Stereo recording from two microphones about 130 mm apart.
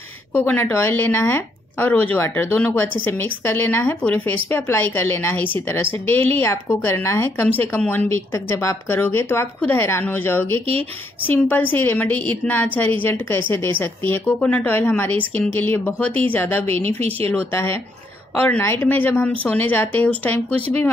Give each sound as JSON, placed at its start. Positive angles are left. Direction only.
{"t": 0.3, "sound": "speech", "side_deg": 15}
{"t": 16.8, "sound": "speech", "side_deg": -50}
{"t": 17.3, "sound": "speech", "side_deg": 15}